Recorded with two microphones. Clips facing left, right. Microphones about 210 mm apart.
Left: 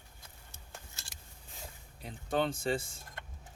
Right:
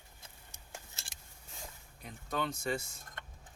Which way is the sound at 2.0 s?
30° left (ahead or behind).